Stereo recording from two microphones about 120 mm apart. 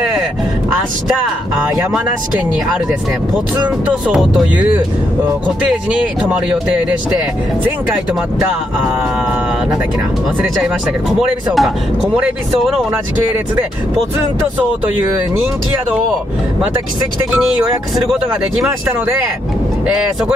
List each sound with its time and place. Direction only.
3.6 s speech: 10° right (ahead or behind)
5.7 s speech: 10° right (ahead or behind)
10.6 s speech: centre (ahead or behind)
12.9 s speech: 15° right (ahead or behind)